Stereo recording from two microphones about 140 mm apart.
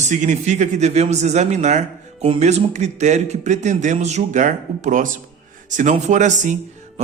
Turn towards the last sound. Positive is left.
turn(degrees=-60)  # may be behind; listen again after turning